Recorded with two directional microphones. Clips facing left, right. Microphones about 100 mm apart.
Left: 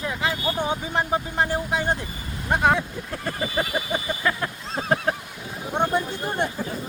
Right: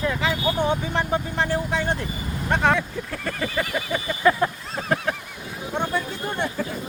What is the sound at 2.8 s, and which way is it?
Speech, 25° left (ahead or behind).